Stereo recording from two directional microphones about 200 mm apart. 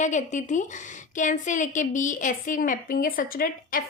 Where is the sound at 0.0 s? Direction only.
35° left (ahead or behind).